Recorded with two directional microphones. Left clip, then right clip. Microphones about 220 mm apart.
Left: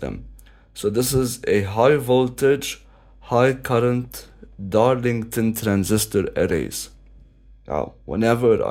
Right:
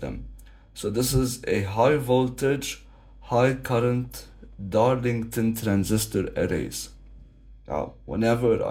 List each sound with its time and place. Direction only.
0.7 s speech: 50° left (ahead or behind)